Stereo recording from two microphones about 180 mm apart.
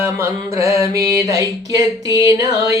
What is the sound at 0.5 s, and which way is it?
Music, 15° right (ahead or behind).